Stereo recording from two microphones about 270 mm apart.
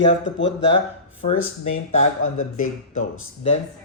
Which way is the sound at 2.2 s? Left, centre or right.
Left.